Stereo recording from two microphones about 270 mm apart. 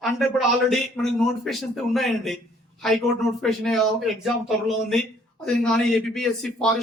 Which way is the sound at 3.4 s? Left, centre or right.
Centre.